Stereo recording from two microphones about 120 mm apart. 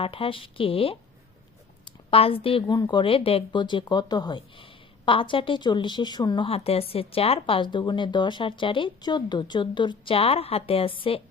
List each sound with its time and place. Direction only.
0.0 s a woman's voice: 50° left (ahead or behind)
2.0 s a woman's voice: 50° left (ahead or behind)
6.5 s a woman's voice: 55° left (ahead or behind)